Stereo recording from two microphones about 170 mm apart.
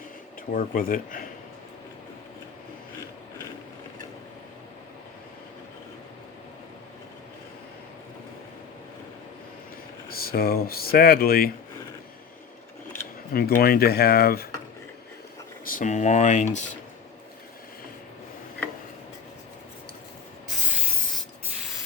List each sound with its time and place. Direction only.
0.5 s speech: 55° left (ahead or behind)
10.1 s speech: 60° left (ahead or behind)
13.3 s speech: 60° left (ahead or behind)
15.7 s speech: 45° left (ahead or behind)